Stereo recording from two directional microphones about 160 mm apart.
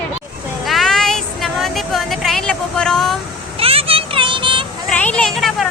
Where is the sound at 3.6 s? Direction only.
35° right (ahead or behind).